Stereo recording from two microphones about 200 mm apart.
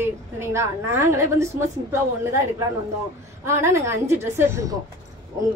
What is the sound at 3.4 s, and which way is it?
A woman's voice, 15° right (ahead or behind).